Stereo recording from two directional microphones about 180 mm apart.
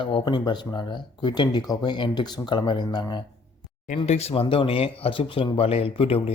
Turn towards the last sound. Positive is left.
turn(degrees=30)  # may be behind; listen again after turning